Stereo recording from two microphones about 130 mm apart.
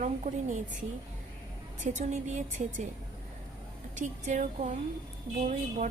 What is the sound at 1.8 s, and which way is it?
Speech, 75° right (ahead or behind).